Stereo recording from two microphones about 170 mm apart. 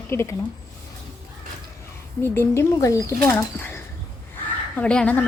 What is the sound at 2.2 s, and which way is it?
A woman's voice, 15° left (ahead or behind).